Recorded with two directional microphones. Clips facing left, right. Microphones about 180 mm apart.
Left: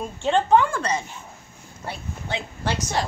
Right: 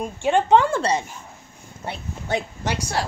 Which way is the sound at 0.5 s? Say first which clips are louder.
Right 3 dB; 25° right (ahead or behind).